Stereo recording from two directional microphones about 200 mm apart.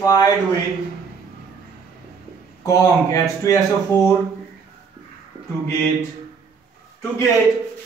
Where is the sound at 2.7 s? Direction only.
15° left (ahead or behind).